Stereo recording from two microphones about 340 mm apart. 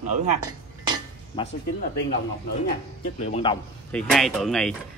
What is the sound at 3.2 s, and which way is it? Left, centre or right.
Speech, centre.